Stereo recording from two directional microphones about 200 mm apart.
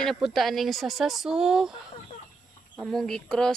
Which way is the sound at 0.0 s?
Centre (ahead or behind).